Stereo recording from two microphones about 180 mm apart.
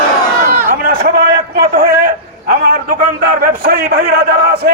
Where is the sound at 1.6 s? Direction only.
55° right (ahead or behind).